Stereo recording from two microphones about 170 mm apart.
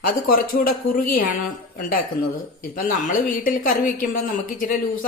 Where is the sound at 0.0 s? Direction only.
55° left (ahead or behind).